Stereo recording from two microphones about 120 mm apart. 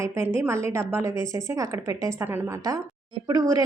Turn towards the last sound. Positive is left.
turn(degrees=-30)  # may be behind; listen again after turning